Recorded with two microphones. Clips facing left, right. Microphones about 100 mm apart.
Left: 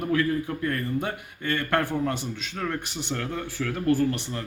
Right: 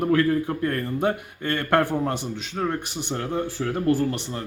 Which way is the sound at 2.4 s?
20° right (ahead or behind).